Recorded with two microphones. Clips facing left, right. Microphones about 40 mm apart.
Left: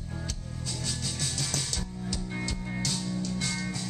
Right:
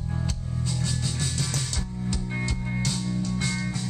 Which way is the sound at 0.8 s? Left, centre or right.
Centre.